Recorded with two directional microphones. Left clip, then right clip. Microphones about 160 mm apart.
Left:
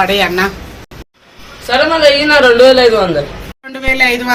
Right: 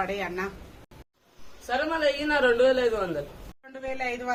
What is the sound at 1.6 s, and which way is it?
A woman's voice, 5° right (ahead or behind).